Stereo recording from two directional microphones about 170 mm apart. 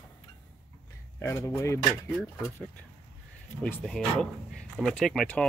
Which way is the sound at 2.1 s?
5° left (ahead or behind).